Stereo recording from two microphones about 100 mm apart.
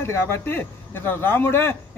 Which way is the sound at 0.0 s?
25° left (ahead or behind).